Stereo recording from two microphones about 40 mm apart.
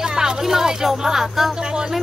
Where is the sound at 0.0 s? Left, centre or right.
Centre.